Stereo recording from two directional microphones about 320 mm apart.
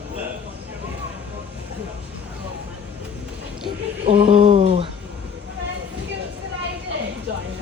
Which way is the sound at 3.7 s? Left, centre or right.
Centre.